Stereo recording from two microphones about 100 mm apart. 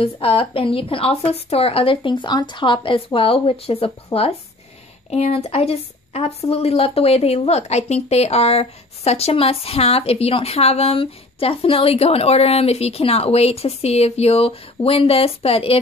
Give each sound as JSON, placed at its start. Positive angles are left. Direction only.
{"t": 0.0, "sound": "speech", "side_deg": 70}
{"t": 1.3, "sound": "speech", "side_deg": 80}
{"t": 5.1, "sound": "a woman's voice", "side_deg": 90}